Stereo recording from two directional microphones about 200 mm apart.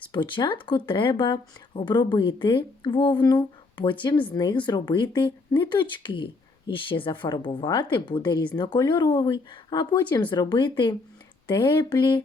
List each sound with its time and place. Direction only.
0.1 s speech: 25° left (ahead or behind)